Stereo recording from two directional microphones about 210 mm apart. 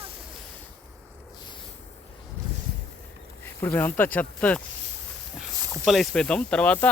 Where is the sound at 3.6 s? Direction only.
10° left (ahead or behind).